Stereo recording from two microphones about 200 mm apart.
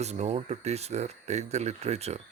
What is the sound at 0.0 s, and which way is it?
Speech, 35° right (ahead or behind).